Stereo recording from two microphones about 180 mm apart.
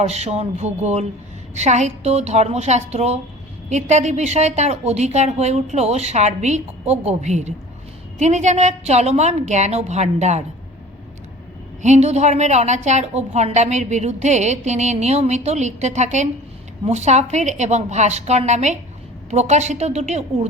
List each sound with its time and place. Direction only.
0.0 s a woman's voice: 35° right (ahead or behind)
11.8 s a woman's voice: 40° right (ahead or behind)